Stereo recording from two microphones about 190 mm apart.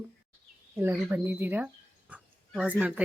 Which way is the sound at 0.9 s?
5° right (ahead or behind).